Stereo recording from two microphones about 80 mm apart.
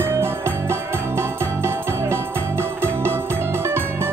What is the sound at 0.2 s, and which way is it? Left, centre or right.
Music, right.